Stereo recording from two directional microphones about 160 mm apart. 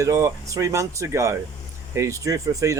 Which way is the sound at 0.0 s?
20° right (ahead or behind).